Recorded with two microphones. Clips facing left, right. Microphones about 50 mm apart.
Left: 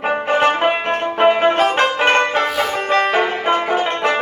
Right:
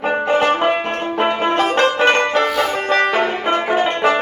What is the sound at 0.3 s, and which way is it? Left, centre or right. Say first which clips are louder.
Music: left 1 dB; centre.